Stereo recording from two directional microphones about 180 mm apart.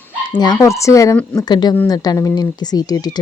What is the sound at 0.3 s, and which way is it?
Speech, 25° left (ahead or behind).